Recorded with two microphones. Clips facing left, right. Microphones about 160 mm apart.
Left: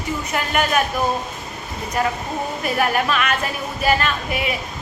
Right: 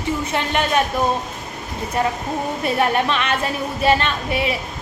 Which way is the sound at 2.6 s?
25° right (ahead or behind).